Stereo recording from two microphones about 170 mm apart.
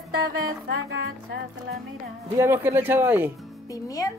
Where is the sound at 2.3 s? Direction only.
15° right (ahead or behind).